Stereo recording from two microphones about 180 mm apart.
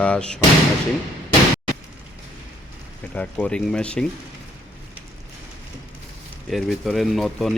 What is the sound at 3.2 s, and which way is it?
Speech, 5° left (ahead or behind).